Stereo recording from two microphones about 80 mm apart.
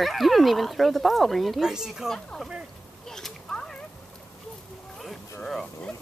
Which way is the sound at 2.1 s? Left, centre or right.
Centre.